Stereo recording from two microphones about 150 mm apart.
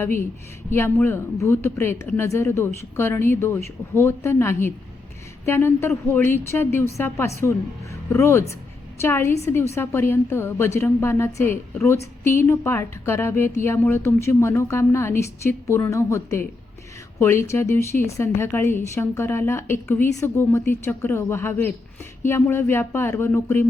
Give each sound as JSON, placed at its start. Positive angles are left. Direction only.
{"t": 0.0, "sound": "a woman's voice", "side_deg": 15}